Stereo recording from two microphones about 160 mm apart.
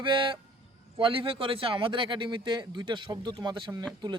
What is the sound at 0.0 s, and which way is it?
Speech, 30° right (ahead or behind).